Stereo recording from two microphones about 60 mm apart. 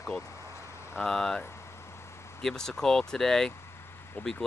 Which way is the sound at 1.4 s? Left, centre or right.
Left.